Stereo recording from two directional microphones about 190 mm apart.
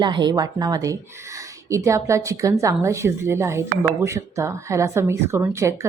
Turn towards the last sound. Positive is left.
turn(degrees=-15)  # may be behind; listen again after turning